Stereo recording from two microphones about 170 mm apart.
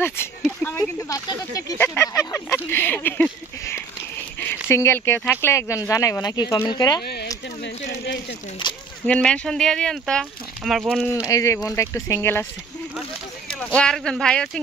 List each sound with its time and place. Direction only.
0.4 s speech: 5° left (ahead or behind)
1.0 s speech: 20° left (ahead or behind)
7.0 s speech: 70° left (ahead or behind)
8.0 s a sound: 90° left
9.0 s speech: 5° left (ahead or behind)
11.2 s speech: 20° left (ahead or behind)
13.6 s speech: 5° left (ahead or behind)